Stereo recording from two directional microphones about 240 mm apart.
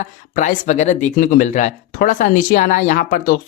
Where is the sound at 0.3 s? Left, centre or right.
Left.